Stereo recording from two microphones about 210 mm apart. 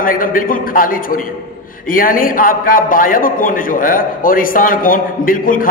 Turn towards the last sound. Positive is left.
turn(degrees=40)  # may be behind; listen again after turning